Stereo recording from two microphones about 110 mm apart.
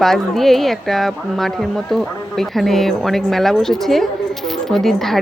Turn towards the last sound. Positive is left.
turn(degrees=5)  # may be behind; listen again after turning